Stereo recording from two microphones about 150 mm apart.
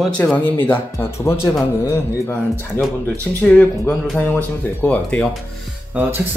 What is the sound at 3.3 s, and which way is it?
Speech, 10° left (ahead or behind).